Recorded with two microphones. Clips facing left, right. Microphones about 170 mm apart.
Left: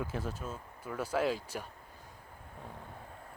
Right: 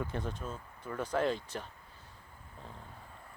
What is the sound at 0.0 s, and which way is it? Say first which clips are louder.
Speech: even; 5° left (ahead or behind).